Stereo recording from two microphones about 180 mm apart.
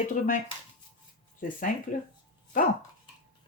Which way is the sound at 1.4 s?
45° left (ahead or behind).